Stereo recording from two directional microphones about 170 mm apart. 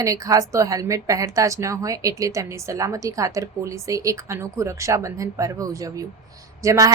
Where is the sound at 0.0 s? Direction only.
20° right (ahead or behind).